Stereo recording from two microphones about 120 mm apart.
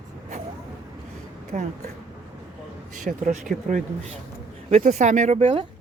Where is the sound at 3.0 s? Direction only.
90° right.